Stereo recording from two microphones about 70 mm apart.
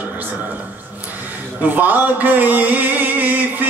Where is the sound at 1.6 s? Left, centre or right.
Right.